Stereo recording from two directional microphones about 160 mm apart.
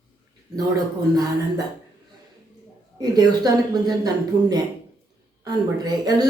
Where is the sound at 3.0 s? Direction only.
25° right (ahead or behind).